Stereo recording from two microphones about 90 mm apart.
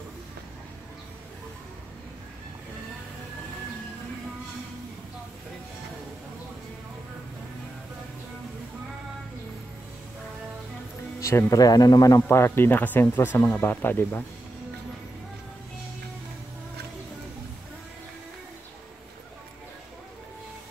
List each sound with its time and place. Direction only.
11.1 s speech: 35° left (ahead or behind)
12.3 s speech: 25° left (ahead or behind)